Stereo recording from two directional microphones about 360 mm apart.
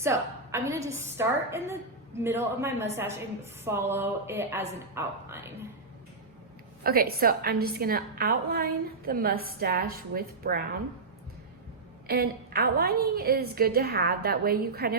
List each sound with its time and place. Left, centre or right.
0.0 s a woman's voice: centre
6.8 s a woman's voice: right
12.0 s a woman's voice: right